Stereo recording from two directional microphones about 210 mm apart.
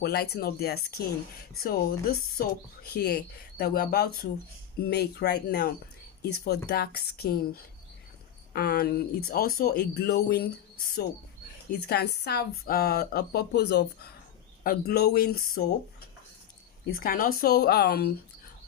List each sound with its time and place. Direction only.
0.0 s speech: 50° left (ahead or behind)
8.5 s speech: 45° left (ahead or behind)
11.9 s speech: 50° left (ahead or behind)